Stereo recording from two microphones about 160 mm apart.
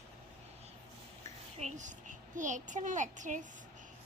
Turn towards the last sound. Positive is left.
turn(degrees=-50)  # may be behind; listen again after turning